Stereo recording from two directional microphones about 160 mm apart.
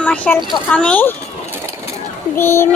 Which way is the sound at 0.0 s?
10° left (ahead or behind).